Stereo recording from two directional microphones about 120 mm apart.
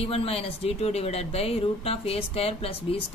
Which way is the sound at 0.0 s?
55° left (ahead or behind).